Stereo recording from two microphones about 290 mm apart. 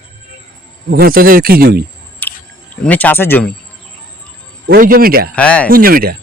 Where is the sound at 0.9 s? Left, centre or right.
Right.